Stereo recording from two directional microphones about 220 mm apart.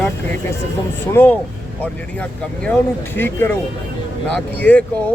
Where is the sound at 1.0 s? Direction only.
10° left (ahead or behind).